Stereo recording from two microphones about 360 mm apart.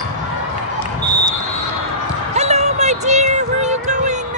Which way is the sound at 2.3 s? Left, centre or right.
Centre.